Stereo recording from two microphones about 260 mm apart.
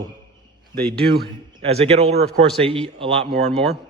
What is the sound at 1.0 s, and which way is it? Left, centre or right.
Speech, right.